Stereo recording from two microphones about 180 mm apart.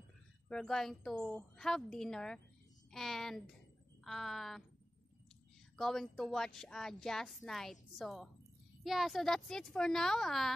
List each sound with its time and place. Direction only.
0.5 s a woman's voice: 5° left (ahead or behind)
5.8 s a woman's voice: centre (ahead or behind)